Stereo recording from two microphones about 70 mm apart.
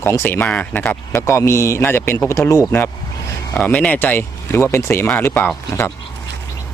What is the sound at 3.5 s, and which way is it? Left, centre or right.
Speech, centre.